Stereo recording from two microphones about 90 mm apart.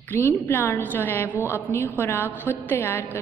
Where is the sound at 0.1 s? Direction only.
25° left (ahead or behind).